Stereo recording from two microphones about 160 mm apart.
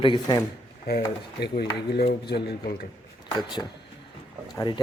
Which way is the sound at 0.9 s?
75° left (ahead or behind).